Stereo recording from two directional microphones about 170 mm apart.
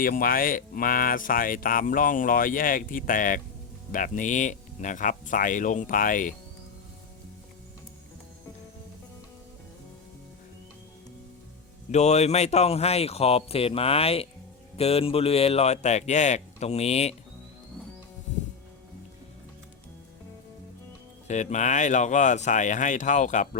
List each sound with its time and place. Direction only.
0.0 s speech: 55° left (ahead or behind)
11.9 s speech: 40° left (ahead or behind)
21.2 s speech: 45° left (ahead or behind)